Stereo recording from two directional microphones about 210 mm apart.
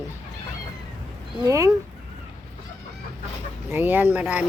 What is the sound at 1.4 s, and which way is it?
Speech, 15° right (ahead or behind).